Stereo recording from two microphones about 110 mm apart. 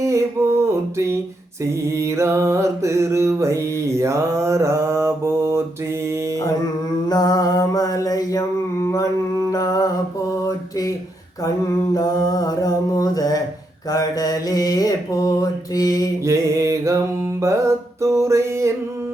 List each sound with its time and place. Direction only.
0.0 s mantra: 25° right (ahead or behind)
0.9 s a sound: 25° right (ahead or behind)
1.6 s mantra: 25° right (ahead or behind)
7.1 s mantra: 35° left (ahead or behind)
11.9 s mantra: 35° left (ahead or behind)
16.2 s music: 25° right (ahead or behind)